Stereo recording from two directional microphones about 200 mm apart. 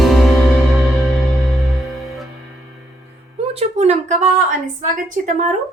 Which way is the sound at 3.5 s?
35° right (ahead or behind).